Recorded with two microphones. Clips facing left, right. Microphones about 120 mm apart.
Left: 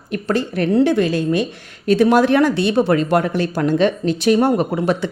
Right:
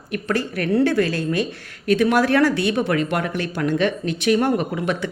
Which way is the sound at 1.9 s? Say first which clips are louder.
Left 4 dB; 30° left (ahead or behind).